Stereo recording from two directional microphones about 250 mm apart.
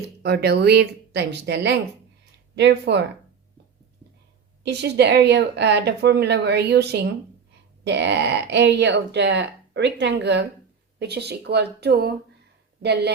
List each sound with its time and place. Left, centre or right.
0.2 s a woman's voice: right
4.6 s a woman's voice: right